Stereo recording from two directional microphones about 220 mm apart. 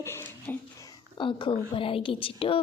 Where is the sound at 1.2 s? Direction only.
20° left (ahead or behind).